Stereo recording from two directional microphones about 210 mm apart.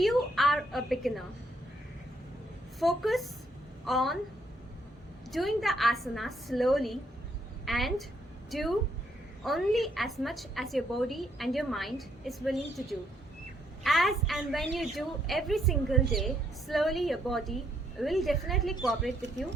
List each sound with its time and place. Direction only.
0.0 s a sound: centre (ahead or behind)
2.7 s a woman's voice: centre (ahead or behind)
5.3 s a woman's voice: centre (ahead or behind)